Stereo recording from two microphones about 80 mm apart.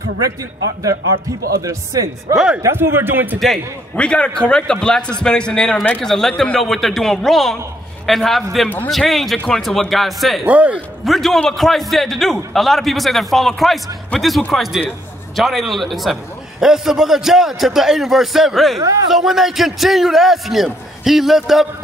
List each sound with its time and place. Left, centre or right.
1.6 s speech: right
2.3 s a man's voice: centre
2.6 s a man's voice: right
3.9 s a man's voice: centre
10.4 s a man's voice: centre
11.1 s a man's voice: centre